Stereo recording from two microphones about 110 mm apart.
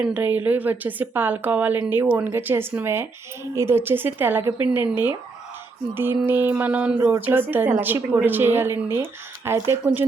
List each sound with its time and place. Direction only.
0.0 s a woman's voice: 15° right (ahead or behind)